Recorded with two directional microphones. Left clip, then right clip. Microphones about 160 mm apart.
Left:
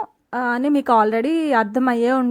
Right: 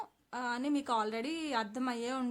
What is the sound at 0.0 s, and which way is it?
A woman's voice, 45° left (ahead or behind).